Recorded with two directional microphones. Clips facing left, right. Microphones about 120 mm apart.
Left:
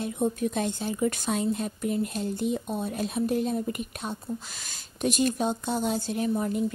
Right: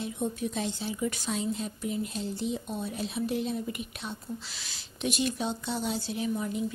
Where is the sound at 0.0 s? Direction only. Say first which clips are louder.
Left 5 dB; 50° left (ahead or behind).